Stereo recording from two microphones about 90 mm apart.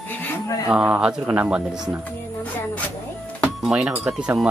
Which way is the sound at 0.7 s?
10° right (ahead or behind).